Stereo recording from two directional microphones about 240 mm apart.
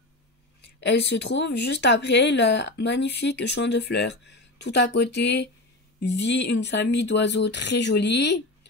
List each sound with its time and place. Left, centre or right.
0.6 s speech: left